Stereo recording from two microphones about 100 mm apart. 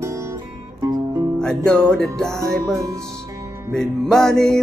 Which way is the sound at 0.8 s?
45° right (ahead or behind).